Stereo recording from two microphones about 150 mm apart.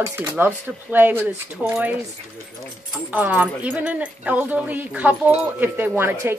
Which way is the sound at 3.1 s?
10° right (ahead or behind).